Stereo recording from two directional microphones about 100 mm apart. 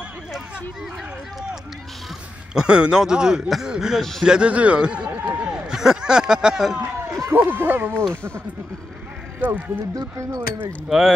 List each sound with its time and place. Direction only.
2.5 s speech: 10° right (ahead or behind)
5.7 s speech: 5° right (ahead or behind)
7.3 s speech: 20° right (ahead or behind)
9.4 s speech: 15° right (ahead or behind)
9.9 s speech: 30° right (ahead or behind)
10.9 s speech: centre (ahead or behind)